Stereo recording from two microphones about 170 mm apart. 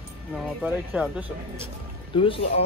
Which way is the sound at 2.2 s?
30° left (ahead or behind).